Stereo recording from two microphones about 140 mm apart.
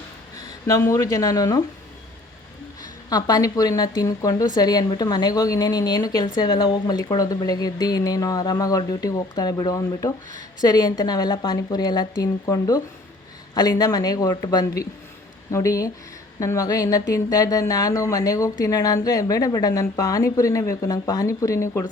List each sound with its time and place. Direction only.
0.7 s a woman's voice: 20° left (ahead or behind)
3.1 s a woman's voice: 30° left (ahead or behind)